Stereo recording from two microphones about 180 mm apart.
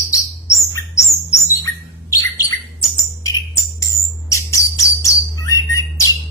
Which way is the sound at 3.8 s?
15° left (ahead or behind).